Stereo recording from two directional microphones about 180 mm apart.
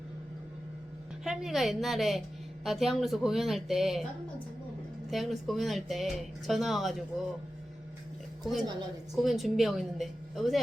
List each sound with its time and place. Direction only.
1.2 s speech: 5° right (ahead or behind)
5.1 s speech: centre (ahead or behind)
9.1 s speech: centre (ahead or behind)